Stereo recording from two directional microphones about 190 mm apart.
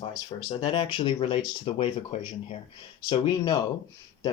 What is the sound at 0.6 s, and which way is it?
Speech, 25° left (ahead or behind).